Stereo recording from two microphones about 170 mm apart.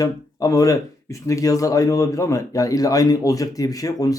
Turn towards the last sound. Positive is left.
turn(degrees=20)  # may be behind; listen again after turning